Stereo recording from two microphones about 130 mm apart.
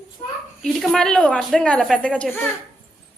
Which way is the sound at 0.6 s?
Centre (ahead or behind).